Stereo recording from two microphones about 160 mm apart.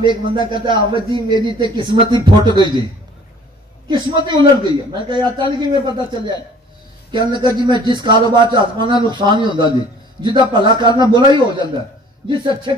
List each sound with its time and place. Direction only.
0.4 s a man's voice: 30° right (ahead or behind)
3.9 s a man's voice: 30° right (ahead or behind)